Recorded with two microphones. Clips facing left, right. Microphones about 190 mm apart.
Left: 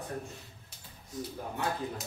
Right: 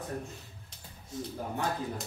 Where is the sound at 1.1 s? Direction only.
25° right (ahead or behind).